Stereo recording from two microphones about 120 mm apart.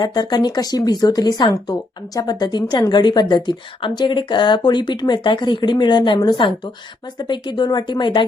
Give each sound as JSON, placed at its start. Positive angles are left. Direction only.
{"t": 0.0, "sound": "speech", "side_deg": 35}